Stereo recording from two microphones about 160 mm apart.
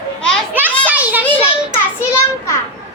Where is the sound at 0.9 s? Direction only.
10° right (ahead or behind).